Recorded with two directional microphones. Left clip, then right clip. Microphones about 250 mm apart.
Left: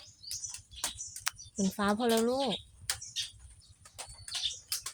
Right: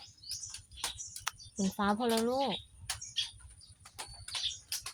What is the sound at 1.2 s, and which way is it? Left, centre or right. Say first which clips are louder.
Speech: left 3 dB; centre.